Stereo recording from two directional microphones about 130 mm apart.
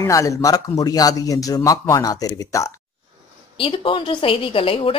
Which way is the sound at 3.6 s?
45° left (ahead or behind).